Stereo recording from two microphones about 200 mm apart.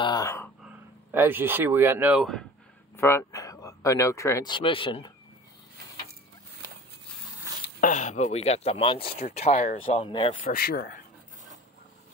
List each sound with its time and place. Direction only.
0.0 s a sound: 20° left (ahead or behind)
1.1 s speech: 10° right (ahead or behind)
3.0 s speech: 10° left (ahead or behind)
7.8 s speech: 35° left (ahead or behind)
10.0 s speech: 25° left (ahead or behind)
10.4 s speech: 50° left (ahead or behind)